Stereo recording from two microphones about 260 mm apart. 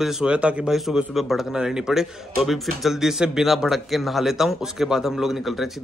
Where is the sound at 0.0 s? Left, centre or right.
Centre.